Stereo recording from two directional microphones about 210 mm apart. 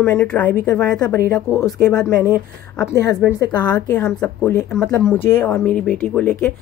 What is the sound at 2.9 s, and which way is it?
Speech, 50° right (ahead or behind).